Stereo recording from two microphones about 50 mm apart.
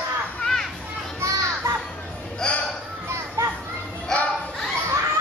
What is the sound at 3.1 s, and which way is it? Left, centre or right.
Children playing, right.